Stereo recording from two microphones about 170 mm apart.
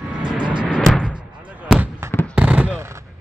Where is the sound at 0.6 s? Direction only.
5° right (ahead or behind).